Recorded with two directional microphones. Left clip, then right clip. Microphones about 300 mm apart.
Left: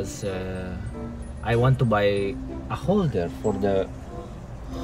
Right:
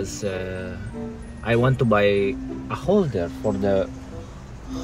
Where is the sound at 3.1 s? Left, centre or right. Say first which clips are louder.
Right 1 dB; centre.